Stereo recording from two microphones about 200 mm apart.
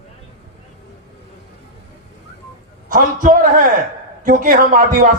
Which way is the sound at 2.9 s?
40° right (ahead or behind).